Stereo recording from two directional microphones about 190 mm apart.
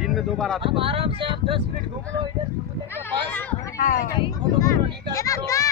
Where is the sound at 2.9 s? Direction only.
10° left (ahead or behind).